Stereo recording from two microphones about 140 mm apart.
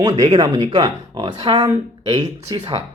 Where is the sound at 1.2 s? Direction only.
40° right (ahead or behind).